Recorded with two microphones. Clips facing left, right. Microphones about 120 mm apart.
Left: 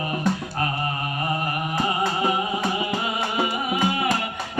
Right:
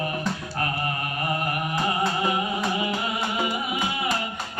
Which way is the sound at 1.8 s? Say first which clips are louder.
Left 1 dB; 25° left (ahead or behind).